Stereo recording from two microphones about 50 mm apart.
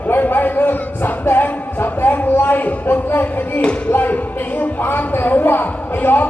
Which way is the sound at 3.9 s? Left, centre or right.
Left.